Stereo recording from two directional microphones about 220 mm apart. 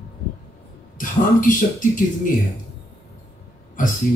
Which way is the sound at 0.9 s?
35° left (ahead or behind).